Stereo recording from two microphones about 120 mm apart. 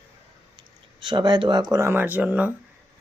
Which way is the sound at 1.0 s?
40° right (ahead or behind).